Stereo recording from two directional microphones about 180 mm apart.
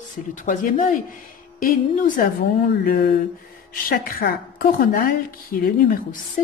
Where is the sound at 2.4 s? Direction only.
60° left (ahead or behind).